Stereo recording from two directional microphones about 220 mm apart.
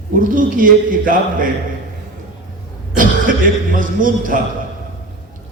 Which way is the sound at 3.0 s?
40° right (ahead or behind).